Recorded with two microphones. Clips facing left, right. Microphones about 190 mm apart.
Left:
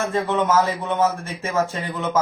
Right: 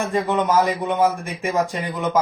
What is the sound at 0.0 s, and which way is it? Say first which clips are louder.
Speech: right 1 dB; 15° right (ahead or behind).